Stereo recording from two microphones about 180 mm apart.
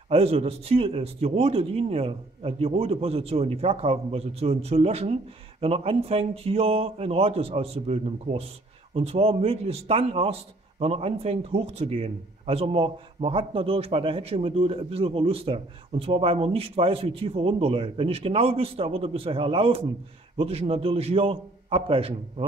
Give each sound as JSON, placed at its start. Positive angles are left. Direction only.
{"t": 0.1, "sound": "a man's voice", "side_deg": -35}